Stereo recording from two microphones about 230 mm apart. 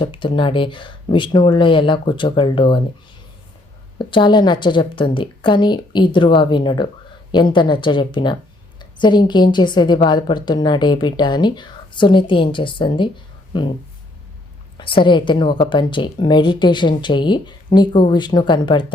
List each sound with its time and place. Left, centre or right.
0.0 s a woman's voice: left
3.9 s a woman's voice: left
14.8 s a woman's voice: left